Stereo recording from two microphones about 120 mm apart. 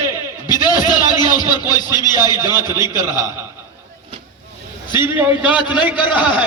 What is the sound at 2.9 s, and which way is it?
Speech, 35° left (ahead or behind).